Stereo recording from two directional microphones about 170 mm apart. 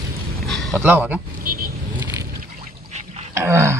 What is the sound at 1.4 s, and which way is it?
Vehicle, 55° right (ahead or behind).